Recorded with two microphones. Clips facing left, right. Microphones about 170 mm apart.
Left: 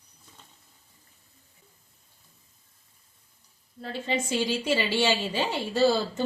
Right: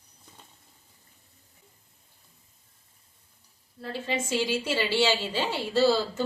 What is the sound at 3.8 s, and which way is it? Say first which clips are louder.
A woman's voice: left 1 dB; 20° left (ahead or behind).